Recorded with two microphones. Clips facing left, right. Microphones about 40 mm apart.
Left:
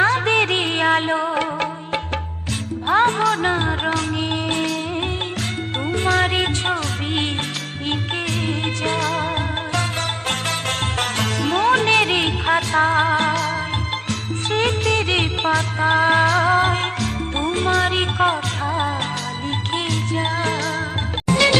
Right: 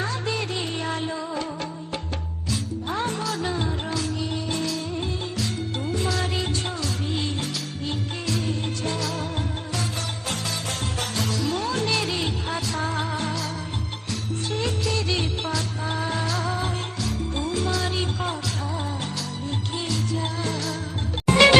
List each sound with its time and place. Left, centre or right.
0.0 s music: left
11.0 s music: left